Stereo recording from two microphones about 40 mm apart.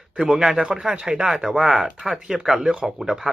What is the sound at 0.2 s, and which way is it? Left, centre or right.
Speech, centre.